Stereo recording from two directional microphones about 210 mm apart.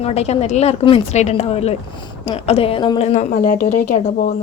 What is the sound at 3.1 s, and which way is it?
Speech, 35° left (ahead or behind).